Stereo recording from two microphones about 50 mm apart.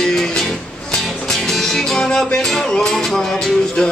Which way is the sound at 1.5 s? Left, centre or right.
Centre.